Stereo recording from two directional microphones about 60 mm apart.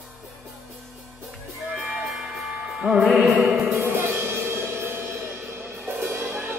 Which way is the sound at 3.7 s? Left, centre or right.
Right.